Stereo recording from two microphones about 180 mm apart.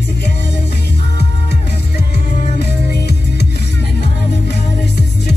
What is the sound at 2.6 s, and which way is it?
Music, 65° left (ahead or behind).